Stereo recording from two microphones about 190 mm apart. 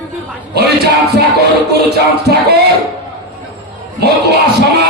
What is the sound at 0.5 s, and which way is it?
Music, 60° right (ahead or behind).